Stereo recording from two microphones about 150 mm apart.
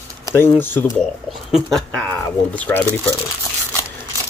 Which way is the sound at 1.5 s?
Centre (ahead or behind).